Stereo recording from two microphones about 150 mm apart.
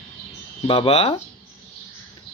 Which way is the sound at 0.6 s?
40° left (ahead or behind).